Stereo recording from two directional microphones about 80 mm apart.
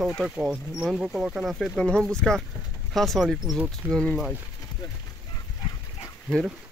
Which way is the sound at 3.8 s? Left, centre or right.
Right.